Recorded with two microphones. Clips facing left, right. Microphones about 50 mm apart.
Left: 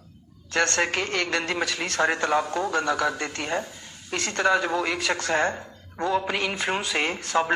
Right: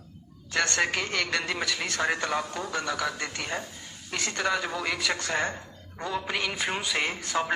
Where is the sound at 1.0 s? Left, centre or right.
Centre.